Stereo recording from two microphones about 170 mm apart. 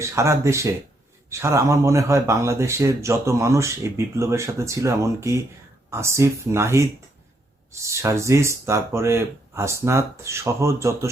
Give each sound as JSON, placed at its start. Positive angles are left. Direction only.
{"t": 0.0, "sound": "speech", "side_deg": -15}